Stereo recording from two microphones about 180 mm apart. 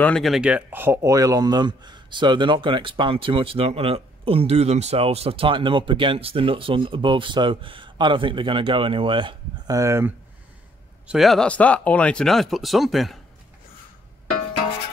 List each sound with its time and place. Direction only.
0.0 s speech: 5° left (ahead or behind); by 10.1 s 15° right (ahead or behind)
11.1 s speech: centre (ahead or behind)